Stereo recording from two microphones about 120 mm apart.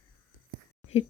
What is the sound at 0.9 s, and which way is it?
Speech, 60° left (ahead or behind).